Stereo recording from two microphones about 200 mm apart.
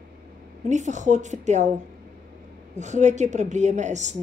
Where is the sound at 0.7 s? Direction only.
35° right (ahead or behind).